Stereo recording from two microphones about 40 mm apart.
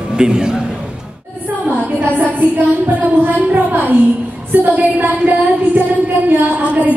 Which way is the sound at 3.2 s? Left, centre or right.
Right.